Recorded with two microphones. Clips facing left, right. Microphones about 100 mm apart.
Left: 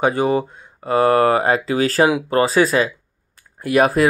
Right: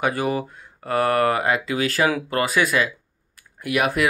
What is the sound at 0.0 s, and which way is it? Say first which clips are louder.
Speech: left 5 dB; 25° left (ahead or behind).